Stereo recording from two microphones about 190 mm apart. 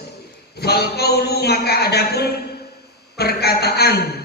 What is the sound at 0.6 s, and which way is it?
A man's voice, 55° left (ahead or behind).